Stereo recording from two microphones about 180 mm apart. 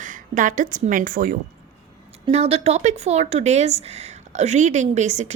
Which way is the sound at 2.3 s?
35° right (ahead or behind).